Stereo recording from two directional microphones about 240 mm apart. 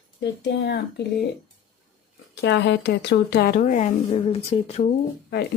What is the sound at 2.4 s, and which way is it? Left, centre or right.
Speech, left.